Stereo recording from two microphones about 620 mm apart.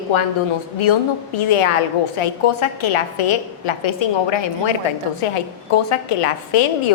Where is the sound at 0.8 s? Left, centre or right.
Left.